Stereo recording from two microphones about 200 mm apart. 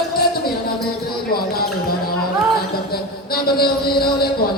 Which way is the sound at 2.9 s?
50° left (ahead or behind).